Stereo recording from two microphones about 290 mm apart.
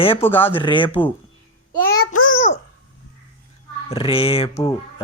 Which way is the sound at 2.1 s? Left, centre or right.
Left.